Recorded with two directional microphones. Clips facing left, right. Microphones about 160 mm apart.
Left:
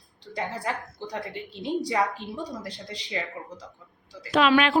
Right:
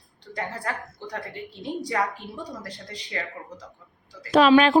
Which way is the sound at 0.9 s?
25° left (ahead or behind).